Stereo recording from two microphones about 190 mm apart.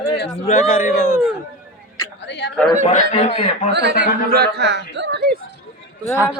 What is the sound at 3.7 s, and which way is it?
Speech, 60° right (ahead or behind).